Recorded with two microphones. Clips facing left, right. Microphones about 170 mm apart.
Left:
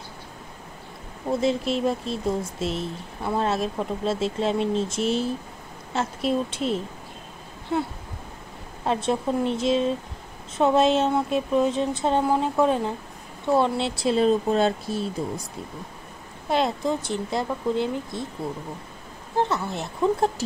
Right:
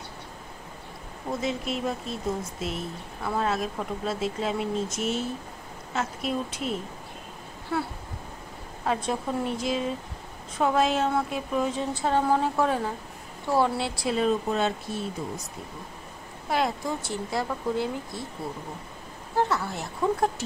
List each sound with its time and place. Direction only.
1.4 s a woman's voice: 30° left (ahead or behind)
16.4 s a woman's voice: 25° left (ahead or behind)
19.3 s a woman's voice: 20° left (ahead or behind)